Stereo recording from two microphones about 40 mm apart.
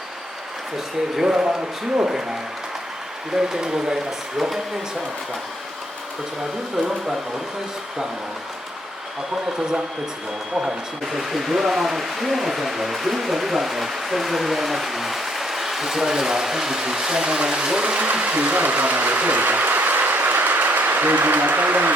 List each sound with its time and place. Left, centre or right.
1.1 s speech: centre
3.3 s speech: centre
11.1 s speech: centre; by 21.1 s right
21.2 s a sound: right